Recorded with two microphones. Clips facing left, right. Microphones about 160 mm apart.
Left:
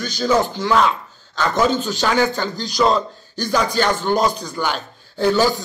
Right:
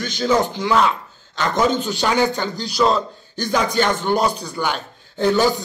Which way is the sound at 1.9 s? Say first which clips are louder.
Even; 15° right (ahead or behind).